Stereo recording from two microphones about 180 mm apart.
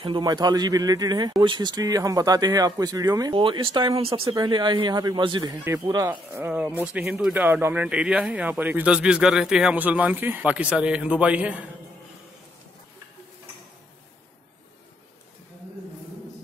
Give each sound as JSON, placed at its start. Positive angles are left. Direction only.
{"t": 0.0, "sound": "speech", "side_deg": -25}